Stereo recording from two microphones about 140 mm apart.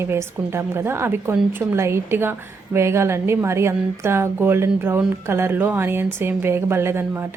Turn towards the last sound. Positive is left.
turn(degrees=-15)  # may be behind; listen again after turning